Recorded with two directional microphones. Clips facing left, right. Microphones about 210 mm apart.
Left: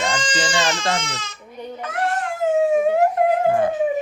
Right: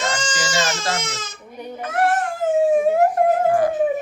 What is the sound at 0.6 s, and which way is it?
Baby cry, 45° right (ahead or behind).